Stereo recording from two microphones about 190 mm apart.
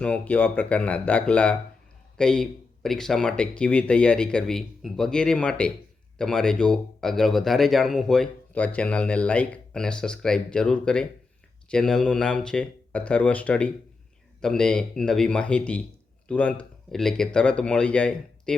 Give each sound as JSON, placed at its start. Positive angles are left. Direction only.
{"t": 0.0, "sound": "speech", "side_deg": 10}